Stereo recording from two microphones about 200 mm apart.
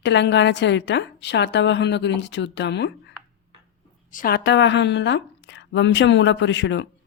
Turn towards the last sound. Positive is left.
turn(degrees=60)  # may be behind; listen again after turning